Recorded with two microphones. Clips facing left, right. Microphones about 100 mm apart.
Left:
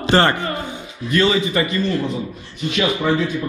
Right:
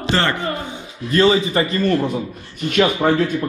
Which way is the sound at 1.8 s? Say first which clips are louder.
Right 3 dB; 50° right (ahead or behind).